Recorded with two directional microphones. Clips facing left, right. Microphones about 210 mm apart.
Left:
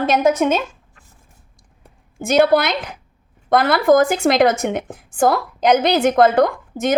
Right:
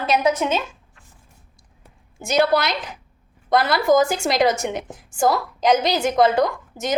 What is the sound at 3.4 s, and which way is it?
A woman's voice, 55° left (ahead or behind).